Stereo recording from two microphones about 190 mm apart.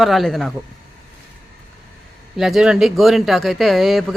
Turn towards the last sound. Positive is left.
turn(degrees=0)  # may be behind; listen again after turning